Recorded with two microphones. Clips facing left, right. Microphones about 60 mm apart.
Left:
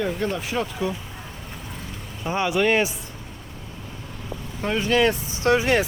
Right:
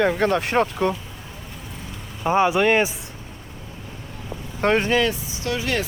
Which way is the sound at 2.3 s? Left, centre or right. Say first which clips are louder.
Right 3 dB; right.